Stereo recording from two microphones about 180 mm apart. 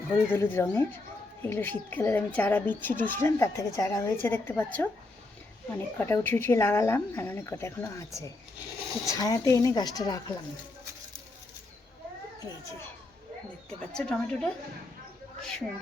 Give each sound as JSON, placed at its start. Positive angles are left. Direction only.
{"t": 0.3, "sound": "speech", "side_deg": 10}
{"t": 13.7, "sound": "a woman's voice", "side_deg": 5}